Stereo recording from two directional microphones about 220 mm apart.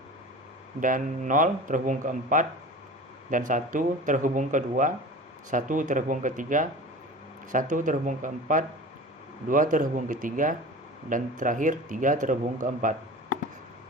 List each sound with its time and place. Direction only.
0.8 s speech: 35° right (ahead or behind)